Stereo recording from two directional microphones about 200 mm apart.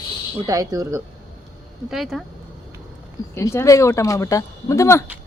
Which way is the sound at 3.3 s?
15° left (ahead or behind).